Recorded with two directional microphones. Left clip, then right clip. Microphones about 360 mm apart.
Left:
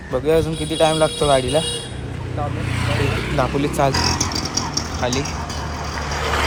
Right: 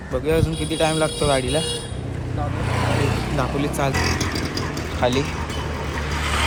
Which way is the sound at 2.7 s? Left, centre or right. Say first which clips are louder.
Right 1 dB; right.